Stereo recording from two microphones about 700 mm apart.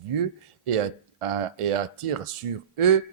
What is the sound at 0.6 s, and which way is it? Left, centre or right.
Speech, right.